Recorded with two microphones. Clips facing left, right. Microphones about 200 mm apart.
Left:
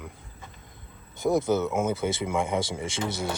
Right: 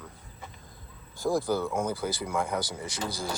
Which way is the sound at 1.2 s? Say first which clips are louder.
Left 3 dB; 20° left (ahead or behind).